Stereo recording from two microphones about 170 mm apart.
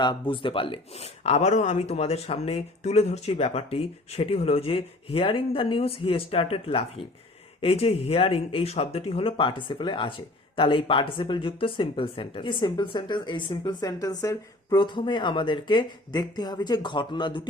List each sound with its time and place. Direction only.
0.0 s speech: 30° left (ahead or behind)